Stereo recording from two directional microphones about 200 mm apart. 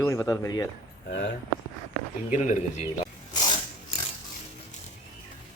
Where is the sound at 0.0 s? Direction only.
15° left (ahead or behind).